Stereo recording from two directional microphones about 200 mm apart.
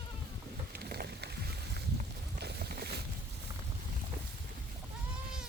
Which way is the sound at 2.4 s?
55° right (ahead or behind).